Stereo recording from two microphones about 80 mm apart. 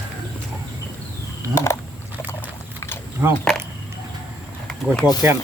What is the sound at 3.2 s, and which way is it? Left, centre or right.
Speech, right.